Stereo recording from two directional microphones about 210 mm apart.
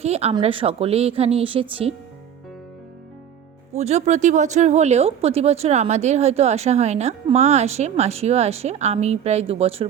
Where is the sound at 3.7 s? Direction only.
30° right (ahead or behind).